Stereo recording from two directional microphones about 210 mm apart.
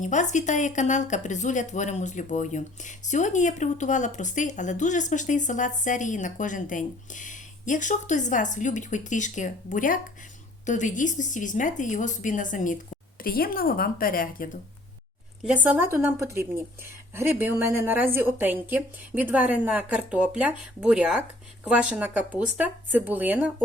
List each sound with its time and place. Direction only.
0.0 s speech: 35° left (ahead or behind)
15.4 s a woman's voice: 5° right (ahead or behind)